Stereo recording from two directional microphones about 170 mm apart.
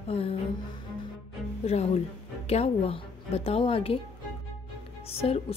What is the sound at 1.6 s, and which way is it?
Speech, 40° left (ahead or behind).